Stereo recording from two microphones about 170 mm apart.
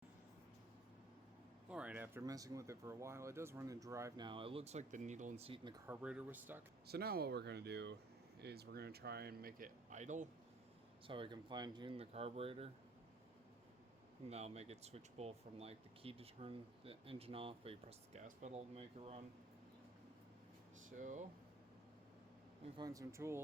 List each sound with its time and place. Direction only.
1.7 s speech: 5° right (ahead or behind)
4.3 s speech: 30° right (ahead or behind)
5.9 s speech: 5° right (ahead or behind)
6.8 s speech: 70° right (ahead or behind); by 7.9 s 85° right
8.4 s speech: 70° right (ahead or behind); by 10.2 s 45° right (ahead or behind)
11.0 s speech: 30° right (ahead or behind)
14.3 s speech: 40° right (ahead or behind)
21.0 s speech: 45° right (ahead or behind)
22.8 s speech: 20° right (ahead or behind)